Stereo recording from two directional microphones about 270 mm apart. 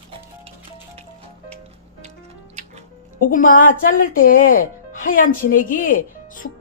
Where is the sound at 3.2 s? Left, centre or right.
Left.